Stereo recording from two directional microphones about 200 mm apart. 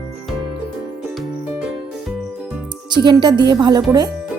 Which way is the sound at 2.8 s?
20° right (ahead or behind).